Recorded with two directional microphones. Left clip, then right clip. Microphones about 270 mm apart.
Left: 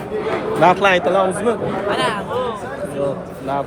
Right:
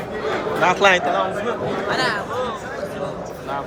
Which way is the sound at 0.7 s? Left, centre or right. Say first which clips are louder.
Even; centre.